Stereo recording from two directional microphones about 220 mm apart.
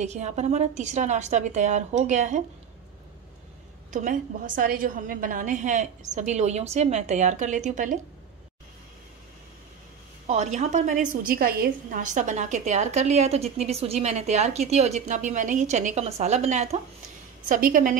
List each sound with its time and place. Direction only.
0.0 s a woman's voice: 30° right (ahead or behind)
3.9 s a woman's voice: 35° right (ahead or behind)
10.2 s a woman's voice: 30° right (ahead or behind)